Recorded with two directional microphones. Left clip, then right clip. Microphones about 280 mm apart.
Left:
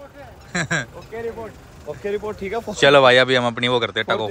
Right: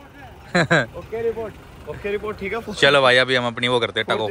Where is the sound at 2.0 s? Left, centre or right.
Left.